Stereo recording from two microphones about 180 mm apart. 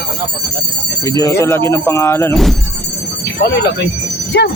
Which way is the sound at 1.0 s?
15° left (ahead or behind).